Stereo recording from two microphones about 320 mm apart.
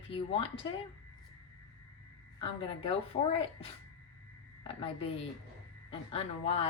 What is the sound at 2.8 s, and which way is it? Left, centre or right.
Speech, centre.